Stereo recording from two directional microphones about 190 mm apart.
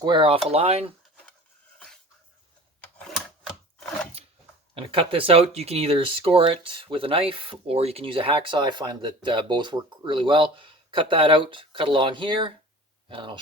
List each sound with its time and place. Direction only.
0.0 s speech: 25° right (ahead or behind)
2.8 s a sound: centre (ahead or behind)
4.7 s speech: 30° right (ahead or behind)